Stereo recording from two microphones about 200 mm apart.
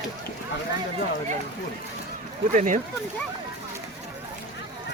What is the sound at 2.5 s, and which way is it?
Speech, 40° right (ahead or behind).